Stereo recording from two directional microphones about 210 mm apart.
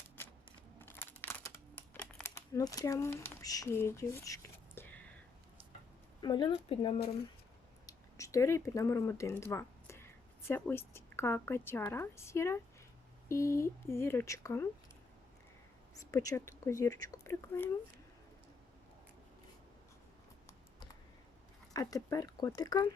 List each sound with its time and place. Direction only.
0.8 s a sound: 10° left (ahead or behind)
6.2 s speech: 20° left (ahead or behind)
16.3 s speech: 10° left (ahead or behind)
21.7 s speech: 15° left (ahead or behind)